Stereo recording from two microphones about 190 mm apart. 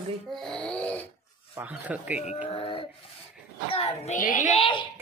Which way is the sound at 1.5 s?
10° right (ahead or behind).